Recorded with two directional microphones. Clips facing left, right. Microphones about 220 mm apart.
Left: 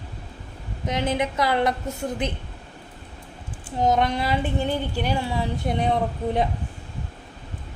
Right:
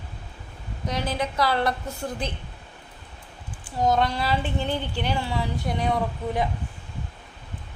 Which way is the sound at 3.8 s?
20° left (ahead or behind).